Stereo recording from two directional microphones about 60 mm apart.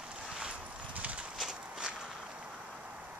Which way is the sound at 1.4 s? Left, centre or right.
Centre.